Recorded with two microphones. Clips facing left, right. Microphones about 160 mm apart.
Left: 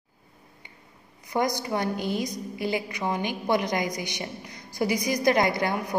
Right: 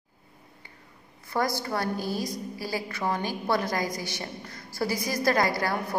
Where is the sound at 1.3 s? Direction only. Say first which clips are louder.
Left 2 dB; 15° left (ahead or behind).